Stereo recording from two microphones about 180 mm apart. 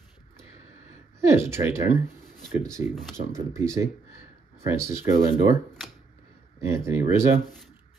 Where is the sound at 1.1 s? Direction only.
15° right (ahead or behind).